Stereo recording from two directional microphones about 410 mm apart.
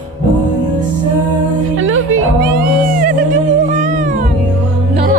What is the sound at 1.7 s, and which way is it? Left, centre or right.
Music, right.